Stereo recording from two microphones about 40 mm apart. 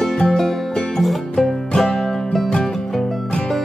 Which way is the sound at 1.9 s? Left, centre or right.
Centre.